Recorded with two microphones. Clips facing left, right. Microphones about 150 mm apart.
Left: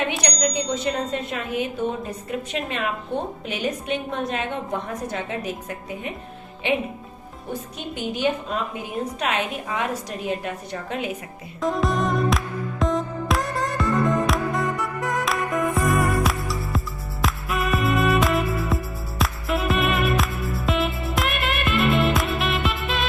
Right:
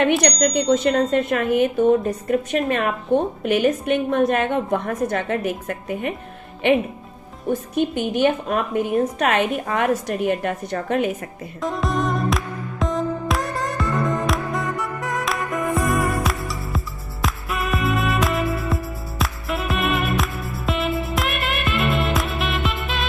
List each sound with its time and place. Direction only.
0.2 s a woman's voice: 55° right (ahead or behind)
7.9 s a woman's voice: 60° right (ahead or behind)
11.6 s music: centre (ahead or behind)